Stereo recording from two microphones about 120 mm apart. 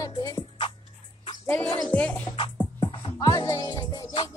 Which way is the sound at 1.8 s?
10° left (ahead or behind).